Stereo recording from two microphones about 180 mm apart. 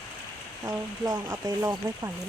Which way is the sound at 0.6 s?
15° right (ahead or behind).